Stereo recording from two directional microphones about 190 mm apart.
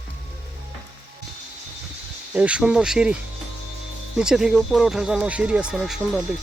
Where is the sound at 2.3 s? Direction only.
5° right (ahead or behind).